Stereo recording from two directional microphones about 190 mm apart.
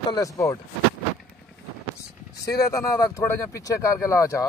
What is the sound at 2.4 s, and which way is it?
Speech, 15° left (ahead or behind).